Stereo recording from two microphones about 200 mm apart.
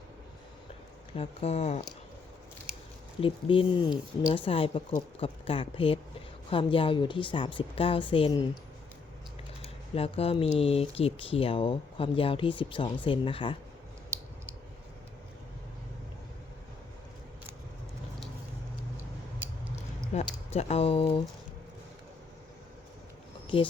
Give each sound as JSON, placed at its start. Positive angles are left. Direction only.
{"t": 1.1, "sound": "speech", "side_deg": 30}
{"t": 3.2, "sound": "speech", "side_deg": 25}
{"t": 9.6, "sound": "speech", "side_deg": 30}
{"t": 20.1, "sound": "speech", "side_deg": 30}